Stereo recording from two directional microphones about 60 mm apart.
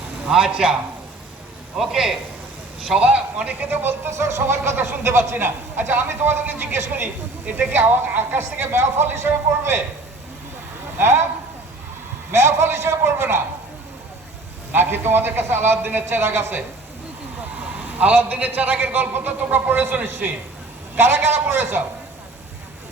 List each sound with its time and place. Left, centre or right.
0.3 s a man's voice: centre
1.8 s a man's voice: centre; by 9.8 s right
10.9 s speech: right
12.3 s a man's voice: right
14.7 s a man's voice: right
17.9 s a man's voice: right